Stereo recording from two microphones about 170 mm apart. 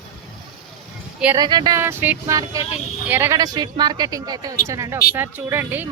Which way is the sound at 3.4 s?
25° right (ahead or behind).